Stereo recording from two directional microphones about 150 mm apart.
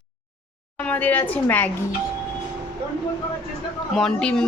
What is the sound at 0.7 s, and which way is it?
Speech, 10° left (ahead or behind).